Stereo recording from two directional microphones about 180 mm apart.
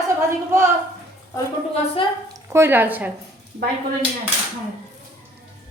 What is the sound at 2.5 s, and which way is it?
Speech, 10° right (ahead or behind).